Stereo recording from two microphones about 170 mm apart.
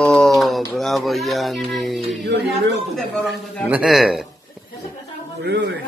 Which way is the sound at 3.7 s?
5° right (ahead or behind).